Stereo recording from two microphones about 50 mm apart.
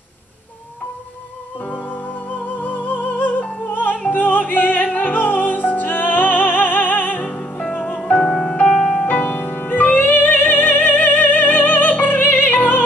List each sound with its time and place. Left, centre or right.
2.6 s music: left
7.2 s music: centre
8.6 s music: centre
9.1 s music: left